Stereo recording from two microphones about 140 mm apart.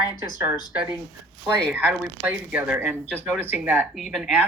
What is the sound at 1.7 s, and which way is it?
Speech, 10° right (ahead or behind).